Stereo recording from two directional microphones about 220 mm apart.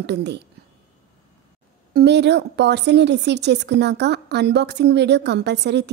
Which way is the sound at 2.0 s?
50° right (ahead or behind).